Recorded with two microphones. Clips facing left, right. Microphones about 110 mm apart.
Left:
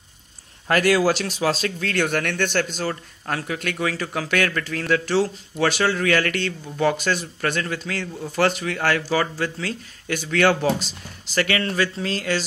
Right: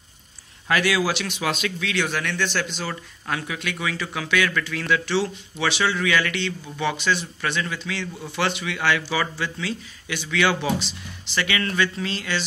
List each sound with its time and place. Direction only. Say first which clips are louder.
0.7 s speech: left 4 dB; 45° left (ahead or behind)